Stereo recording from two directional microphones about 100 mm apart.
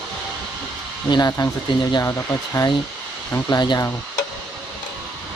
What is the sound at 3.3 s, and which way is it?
Speech, 40° left (ahead or behind).